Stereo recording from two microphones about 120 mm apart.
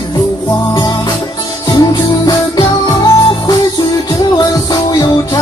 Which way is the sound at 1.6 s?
35° left (ahead or behind).